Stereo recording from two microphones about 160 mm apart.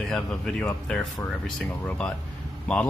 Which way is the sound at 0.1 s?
5° left (ahead or behind).